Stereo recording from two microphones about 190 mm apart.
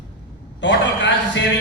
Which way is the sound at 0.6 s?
70° left (ahead or behind).